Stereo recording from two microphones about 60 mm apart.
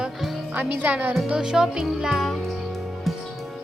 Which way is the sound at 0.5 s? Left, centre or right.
Right.